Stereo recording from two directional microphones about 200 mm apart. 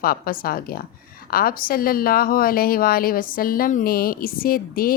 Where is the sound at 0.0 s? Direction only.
45° left (ahead or behind).